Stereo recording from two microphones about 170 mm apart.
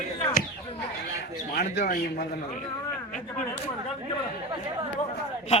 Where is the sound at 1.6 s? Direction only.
55° left (ahead or behind).